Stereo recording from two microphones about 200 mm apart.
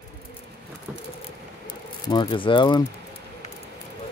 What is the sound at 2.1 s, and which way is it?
Speech, 25° left (ahead or behind).